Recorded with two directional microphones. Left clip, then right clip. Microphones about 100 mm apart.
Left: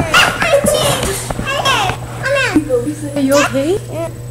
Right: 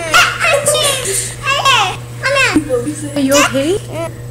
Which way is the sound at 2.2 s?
25° right (ahead or behind).